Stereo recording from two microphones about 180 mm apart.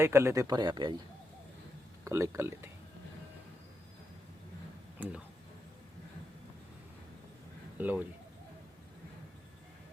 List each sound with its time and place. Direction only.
0.0 s speech: 15° right (ahead or behind)
2.0 s speech: 15° right (ahead or behind)
4.9 s speech: 10° right (ahead or behind)
7.8 s speech: 10° right (ahead or behind)